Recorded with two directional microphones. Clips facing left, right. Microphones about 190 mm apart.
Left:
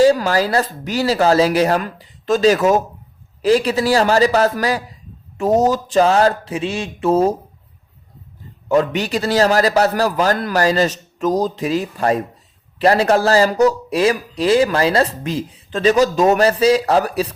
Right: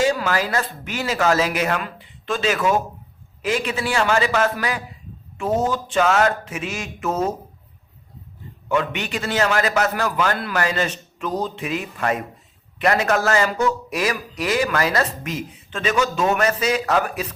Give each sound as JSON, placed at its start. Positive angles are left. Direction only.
{"t": 0.0, "sound": "speech", "side_deg": 35}
{"t": 8.7, "sound": "speech", "side_deg": 35}